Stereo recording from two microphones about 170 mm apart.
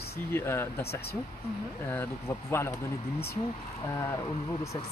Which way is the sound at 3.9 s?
15° left (ahead or behind).